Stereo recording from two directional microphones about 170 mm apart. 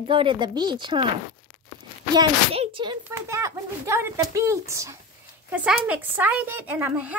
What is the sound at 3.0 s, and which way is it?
Speech, 15° right (ahead or behind).